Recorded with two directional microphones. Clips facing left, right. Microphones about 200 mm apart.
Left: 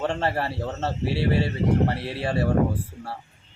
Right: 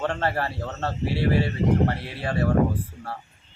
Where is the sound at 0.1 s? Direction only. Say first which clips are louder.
Left 1 dB; 25° left (ahead or behind).